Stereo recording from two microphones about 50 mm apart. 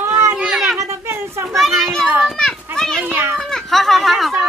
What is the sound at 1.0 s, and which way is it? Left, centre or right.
Children playing, right.